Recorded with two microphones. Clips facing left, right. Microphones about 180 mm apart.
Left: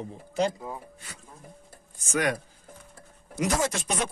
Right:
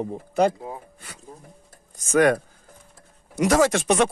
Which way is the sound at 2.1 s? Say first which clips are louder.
Right 9 dB; 55° right (ahead or behind).